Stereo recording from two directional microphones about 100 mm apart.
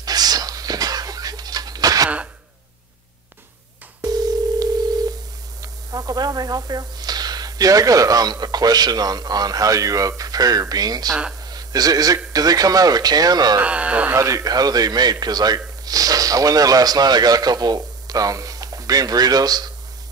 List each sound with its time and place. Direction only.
0.0 s a sound: 40° right (ahead or behind)
4.0 s telephone: 40° right (ahead or behind)
5.6 s speech: 40° right (ahead or behind)
11.4 s a sound: 40° right (ahead or behind)
12.3 s speech: 40° right (ahead or behind)
13.6 s speech: 15° right (ahead or behind)
14.1 s a man's voice: 30° right (ahead or behind)